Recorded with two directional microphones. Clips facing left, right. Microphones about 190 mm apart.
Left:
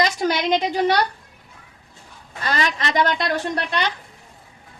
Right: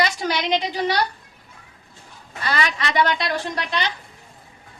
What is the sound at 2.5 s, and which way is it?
A woman's voice, 40° left (ahead or behind).